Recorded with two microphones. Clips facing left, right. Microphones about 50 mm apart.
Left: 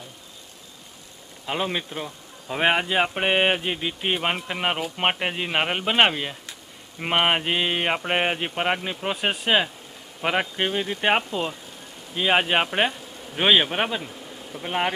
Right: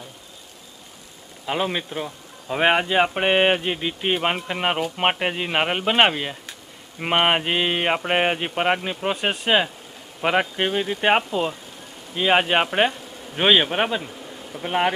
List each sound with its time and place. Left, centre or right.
1.5 s a man's voice: centre